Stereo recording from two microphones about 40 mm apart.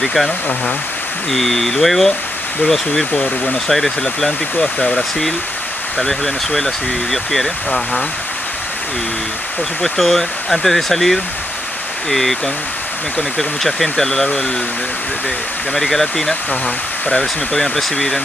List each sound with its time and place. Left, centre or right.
0.0 s speech: centre
1.3 s speech: centre
4.6 s speech: left
5.9 s speech: centre
9.8 s speech: centre
13.4 s speech: centre
15.7 s speech: centre